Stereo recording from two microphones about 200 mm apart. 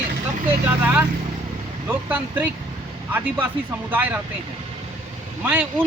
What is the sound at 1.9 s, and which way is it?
Speech, 10° right (ahead or behind).